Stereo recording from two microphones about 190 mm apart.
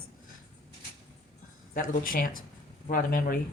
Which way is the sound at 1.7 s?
45° left (ahead or behind).